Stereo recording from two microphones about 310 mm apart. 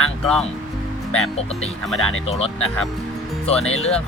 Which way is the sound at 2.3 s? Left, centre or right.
Centre.